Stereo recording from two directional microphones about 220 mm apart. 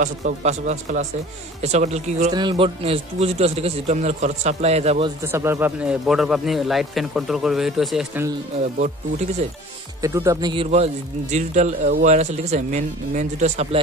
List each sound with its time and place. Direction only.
0.4 s a man's voice: 30° right (ahead or behind)
5.2 s a man's voice: 10° right (ahead or behind)
8.7 s speech: 35° right (ahead or behind)
10.0 s speech: 15° right (ahead or behind); by 13.7 s 30° right (ahead or behind)